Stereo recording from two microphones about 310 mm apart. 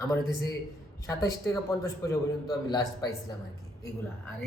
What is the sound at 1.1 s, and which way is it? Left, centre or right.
A man's voice, centre.